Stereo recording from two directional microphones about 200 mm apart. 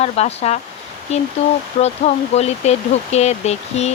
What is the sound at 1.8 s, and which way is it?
Speech, 35° left (ahead or behind).